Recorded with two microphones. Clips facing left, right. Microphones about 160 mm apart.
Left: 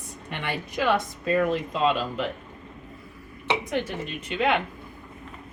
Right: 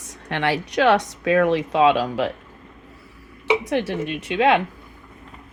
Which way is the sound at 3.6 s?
80° right.